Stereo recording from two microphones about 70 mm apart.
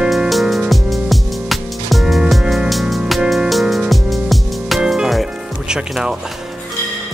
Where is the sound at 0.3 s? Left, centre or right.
Centre.